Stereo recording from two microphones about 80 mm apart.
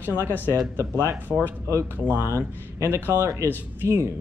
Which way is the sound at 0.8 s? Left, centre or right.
Right.